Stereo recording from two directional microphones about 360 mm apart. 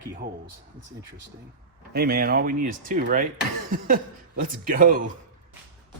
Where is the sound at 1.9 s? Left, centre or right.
Right.